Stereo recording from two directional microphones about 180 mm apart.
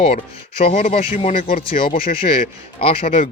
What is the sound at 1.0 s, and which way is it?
Speech, 35° left (ahead or behind).